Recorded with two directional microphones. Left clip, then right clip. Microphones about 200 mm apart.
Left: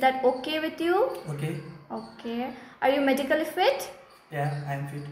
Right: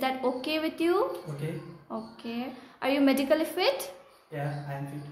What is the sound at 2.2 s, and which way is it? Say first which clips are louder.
A woman's voice: left 4 dB; 5° right (ahead or behind).